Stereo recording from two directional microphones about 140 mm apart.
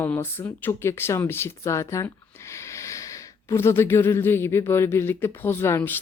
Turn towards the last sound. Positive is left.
turn(degrees=15)  # may be behind; listen again after turning